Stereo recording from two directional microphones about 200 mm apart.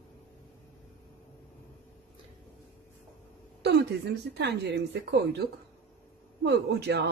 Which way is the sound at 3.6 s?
60° right (ahead or behind).